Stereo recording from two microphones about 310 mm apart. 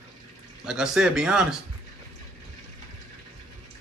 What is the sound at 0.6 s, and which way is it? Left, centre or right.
Speech, centre.